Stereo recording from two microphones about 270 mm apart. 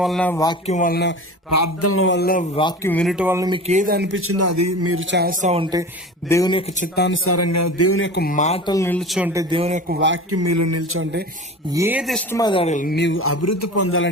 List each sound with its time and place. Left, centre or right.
0.0 s speech: centre
0.7 s speech: left
1.5 s speech: left
1.9 s speech: left
2.6 s speech: centre
2.9 s speech: centre
3.7 s speech: right
6.2 s a man's voice: centre; by 7.2 s left
7.3 s a man's voice: left; by 10.0 s right
10.3 s speech: right
11.7 s speech: centre
12.4 s a man's voice: centre; by 14.1 s left